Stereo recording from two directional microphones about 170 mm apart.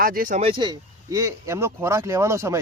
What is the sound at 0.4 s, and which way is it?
Speech, 25° right (ahead or behind).